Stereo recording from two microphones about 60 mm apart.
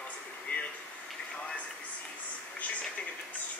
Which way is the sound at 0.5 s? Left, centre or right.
Left.